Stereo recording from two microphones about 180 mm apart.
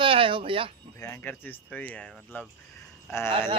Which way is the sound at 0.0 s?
30° right (ahead or behind).